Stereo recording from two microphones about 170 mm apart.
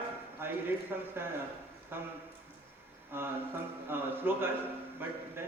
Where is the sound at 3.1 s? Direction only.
10° right (ahead or behind).